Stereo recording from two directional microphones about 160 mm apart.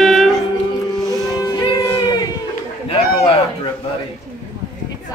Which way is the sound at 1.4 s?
30° left (ahead or behind).